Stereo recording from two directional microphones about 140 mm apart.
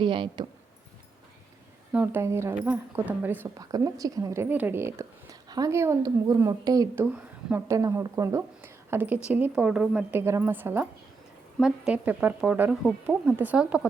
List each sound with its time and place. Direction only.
0.0 s speech: 35° right (ahead or behind)
1.9 s a woman's voice: 15° right (ahead or behind)
3.6 s speech: 25° right (ahead or behind)
6.9 s a woman's voice: 10° right (ahead or behind)